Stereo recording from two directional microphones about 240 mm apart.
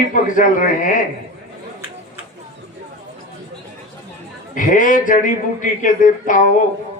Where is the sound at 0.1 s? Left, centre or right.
Left.